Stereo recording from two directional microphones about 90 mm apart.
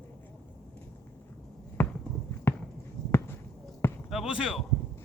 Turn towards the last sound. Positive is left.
turn(degrees=-10)  # may be behind; listen again after turning